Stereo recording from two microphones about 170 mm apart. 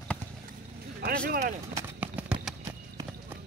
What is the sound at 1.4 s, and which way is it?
Speech, 40° right (ahead or behind).